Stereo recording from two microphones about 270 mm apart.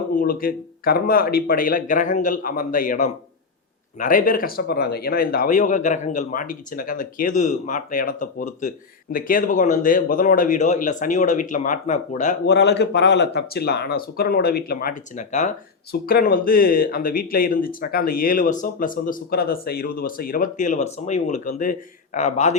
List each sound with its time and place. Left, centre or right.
0.2 s speech: left